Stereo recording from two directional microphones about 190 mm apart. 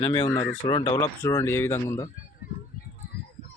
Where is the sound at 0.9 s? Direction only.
15° left (ahead or behind).